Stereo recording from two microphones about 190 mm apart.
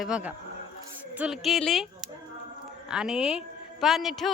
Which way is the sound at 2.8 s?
5° right (ahead or behind).